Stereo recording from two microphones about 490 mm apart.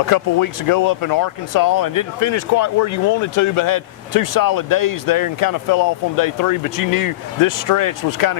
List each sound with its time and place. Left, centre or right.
0.0 s speech: left